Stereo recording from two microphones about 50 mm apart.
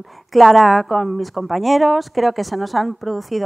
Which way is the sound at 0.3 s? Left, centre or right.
Centre.